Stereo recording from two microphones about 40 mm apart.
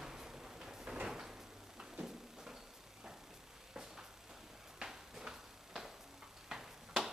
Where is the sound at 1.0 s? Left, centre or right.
Centre.